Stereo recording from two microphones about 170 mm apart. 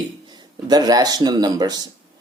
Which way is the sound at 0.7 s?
25° right (ahead or behind).